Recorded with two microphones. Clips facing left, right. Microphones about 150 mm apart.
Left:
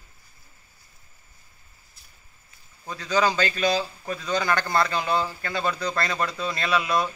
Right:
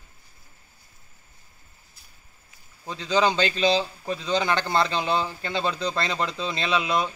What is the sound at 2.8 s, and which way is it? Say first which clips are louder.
A man's voice: right 1 dB; 20° right (ahead or behind).